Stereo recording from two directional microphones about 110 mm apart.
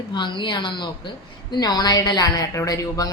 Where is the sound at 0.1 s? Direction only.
45° left (ahead or behind).